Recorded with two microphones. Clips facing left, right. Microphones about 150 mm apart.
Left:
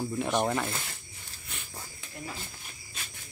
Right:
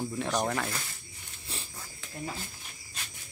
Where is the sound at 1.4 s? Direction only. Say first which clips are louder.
Right 3 dB; 30° right (ahead or behind).